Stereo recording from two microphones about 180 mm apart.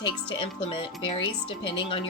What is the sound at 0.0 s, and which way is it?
A woman's voice, 25° left (ahead or behind).